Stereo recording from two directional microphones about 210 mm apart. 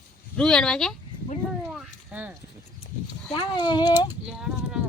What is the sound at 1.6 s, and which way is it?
Children playing, 10° right (ahead or behind).